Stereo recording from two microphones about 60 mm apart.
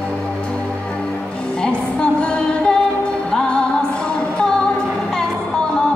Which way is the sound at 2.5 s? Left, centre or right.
Centre.